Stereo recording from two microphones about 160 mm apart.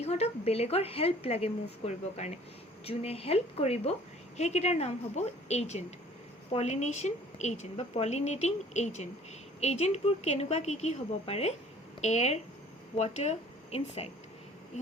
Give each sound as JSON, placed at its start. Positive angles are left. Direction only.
{"t": 0.0, "sound": "a woman's voice", "side_deg": 40}